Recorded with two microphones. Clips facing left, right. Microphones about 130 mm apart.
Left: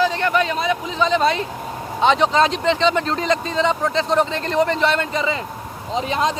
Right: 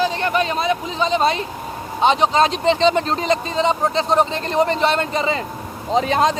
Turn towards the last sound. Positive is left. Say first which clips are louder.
# right 4 dB
turn(degrees=-40)  # may be behind; listen again after turning